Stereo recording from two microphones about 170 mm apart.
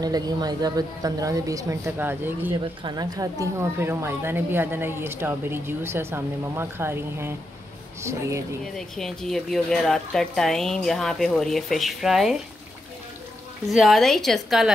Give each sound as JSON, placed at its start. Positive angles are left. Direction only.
{"t": 0.0, "sound": "a woman's voice", "side_deg": -25}
{"t": 2.6, "sound": "speech", "side_deg": -25}
{"t": 8.7, "sound": "speech", "side_deg": 0}
{"t": 13.7, "sound": "speech", "side_deg": 0}